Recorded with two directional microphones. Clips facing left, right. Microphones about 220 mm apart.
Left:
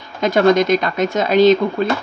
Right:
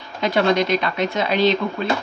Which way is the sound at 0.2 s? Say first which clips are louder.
Left 5 dB; 45° left (ahead or behind).